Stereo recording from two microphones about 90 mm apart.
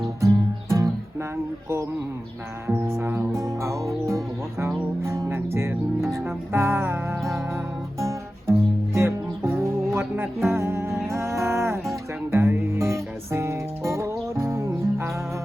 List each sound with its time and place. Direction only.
0.2 s music: 35° right (ahead or behind)
2.6 s music: 30° right (ahead or behind)
7.2 s music: centre (ahead or behind)
7.9 s music: 35° right (ahead or behind)